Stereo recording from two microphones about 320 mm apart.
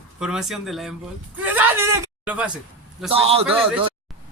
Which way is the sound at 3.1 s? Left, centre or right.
Centre.